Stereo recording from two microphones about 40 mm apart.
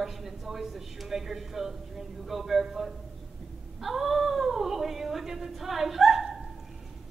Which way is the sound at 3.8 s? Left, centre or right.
Centre.